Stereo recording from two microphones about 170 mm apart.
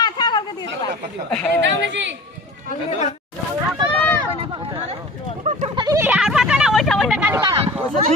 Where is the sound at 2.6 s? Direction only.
45° left (ahead or behind).